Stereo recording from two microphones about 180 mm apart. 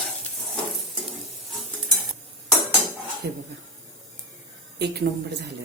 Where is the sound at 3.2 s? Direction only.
65° right (ahead or behind).